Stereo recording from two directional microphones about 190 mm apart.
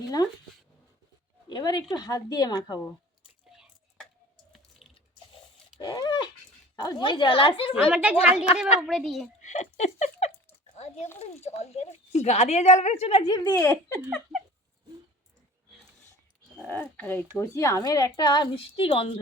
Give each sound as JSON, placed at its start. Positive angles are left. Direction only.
{"t": 0.2, "sound": "a woman's voice", "side_deg": 20}
{"t": 1.5, "sound": "a woman's voice", "side_deg": 20}
{"t": 4.8, "sound": "water", "side_deg": 0}
{"t": 5.8, "sound": "dog", "side_deg": 20}
{"t": 6.7, "sound": "a woman's voice", "side_deg": 25}
{"t": 7.7, "sound": "speech", "side_deg": -5}
{"t": 9.4, "sound": "a sound", "side_deg": 40}
{"t": 11.4, "sound": "a woman's voice", "side_deg": 35}
{"t": 16.6, "sound": "speech", "side_deg": 10}